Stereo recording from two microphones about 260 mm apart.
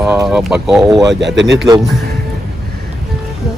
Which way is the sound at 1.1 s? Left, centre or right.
Right.